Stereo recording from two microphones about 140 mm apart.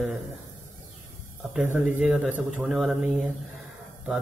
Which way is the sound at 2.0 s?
Centre (ahead or behind).